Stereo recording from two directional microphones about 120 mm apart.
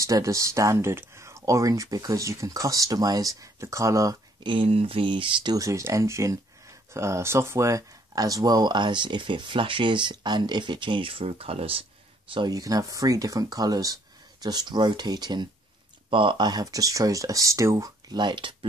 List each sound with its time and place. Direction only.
0.0 s speech: 25° right (ahead or behind)
4.5 s speech: 50° right (ahead or behind)
12.4 s speech: 30° right (ahead or behind)